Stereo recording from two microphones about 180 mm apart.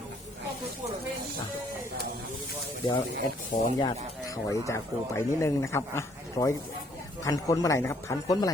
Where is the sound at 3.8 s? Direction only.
20° left (ahead or behind).